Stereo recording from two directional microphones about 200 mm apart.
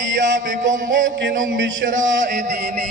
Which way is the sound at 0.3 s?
40° right (ahead or behind).